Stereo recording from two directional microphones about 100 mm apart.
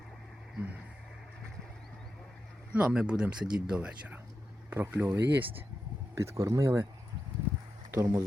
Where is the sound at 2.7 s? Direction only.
10° right (ahead or behind).